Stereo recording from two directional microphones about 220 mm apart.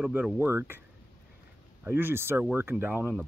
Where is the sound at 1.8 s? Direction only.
10° right (ahead or behind).